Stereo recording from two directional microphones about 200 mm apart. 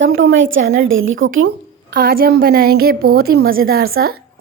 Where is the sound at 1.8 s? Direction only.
50° right (ahead or behind).